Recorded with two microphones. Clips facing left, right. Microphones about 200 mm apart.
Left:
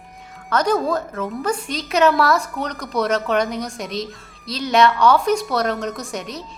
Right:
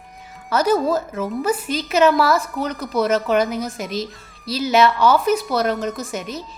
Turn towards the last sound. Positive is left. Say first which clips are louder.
# right 1 dB
turn(degrees=0)  # may be behind; listen again after turning